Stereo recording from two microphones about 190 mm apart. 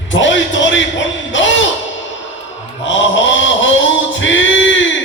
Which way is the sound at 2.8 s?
75° left (ahead or behind).